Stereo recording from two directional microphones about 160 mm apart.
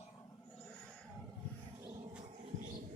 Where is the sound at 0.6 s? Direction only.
10° left (ahead or behind).